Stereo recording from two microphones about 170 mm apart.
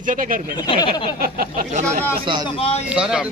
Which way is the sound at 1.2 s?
60° right (ahead or behind).